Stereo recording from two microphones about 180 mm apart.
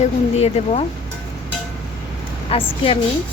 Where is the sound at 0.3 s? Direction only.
35° left (ahead or behind).